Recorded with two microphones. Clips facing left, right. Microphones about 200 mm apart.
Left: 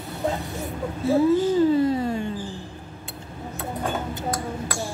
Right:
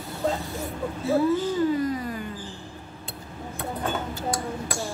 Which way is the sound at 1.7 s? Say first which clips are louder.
Left 5 dB; 30° left (ahead or behind).